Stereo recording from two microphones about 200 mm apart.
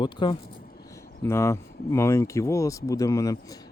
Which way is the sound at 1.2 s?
15° left (ahead or behind).